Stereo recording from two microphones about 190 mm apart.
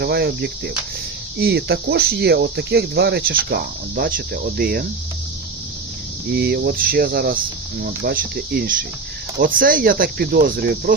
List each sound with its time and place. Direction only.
0.0 s speech: 55° right (ahead or behind)
6.3 s speech: 55° right (ahead or behind)